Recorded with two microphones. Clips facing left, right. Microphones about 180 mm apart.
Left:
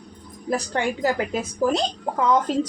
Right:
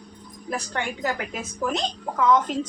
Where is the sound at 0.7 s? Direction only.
30° left (ahead or behind).